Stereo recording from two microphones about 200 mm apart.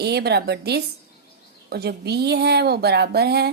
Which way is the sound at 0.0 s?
55° right (ahead or behind).